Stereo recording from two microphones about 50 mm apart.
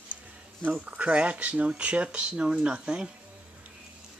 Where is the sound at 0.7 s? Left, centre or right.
Right.